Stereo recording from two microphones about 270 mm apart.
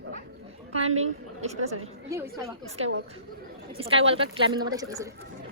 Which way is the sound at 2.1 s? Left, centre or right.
Centre.